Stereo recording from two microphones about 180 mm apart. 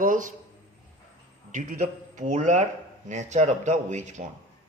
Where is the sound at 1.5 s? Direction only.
45° right (ahead or behind).